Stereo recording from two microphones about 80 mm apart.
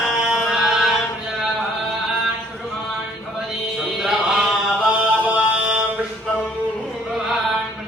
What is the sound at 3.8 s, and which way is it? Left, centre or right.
Chant, centre.